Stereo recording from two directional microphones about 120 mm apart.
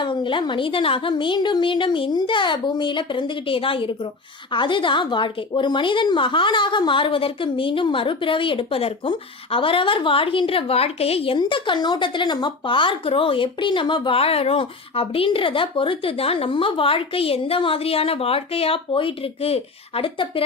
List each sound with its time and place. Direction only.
0.0 s speech: 45° left (ahead or behind)
11.3 s speech: 45° left (ahead or behind)